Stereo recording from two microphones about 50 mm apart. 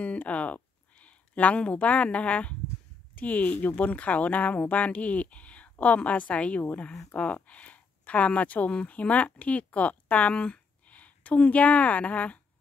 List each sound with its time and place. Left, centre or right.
0.0 s speech: left